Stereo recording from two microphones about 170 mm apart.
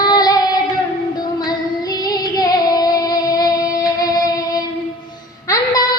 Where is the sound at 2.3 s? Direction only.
25° left (ahead or behind).